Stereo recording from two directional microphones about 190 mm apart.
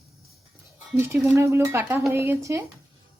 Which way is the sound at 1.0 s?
15° right (ahead or behind).